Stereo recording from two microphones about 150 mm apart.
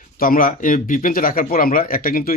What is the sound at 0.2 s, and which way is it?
Speech, 70° left (ahead or behind).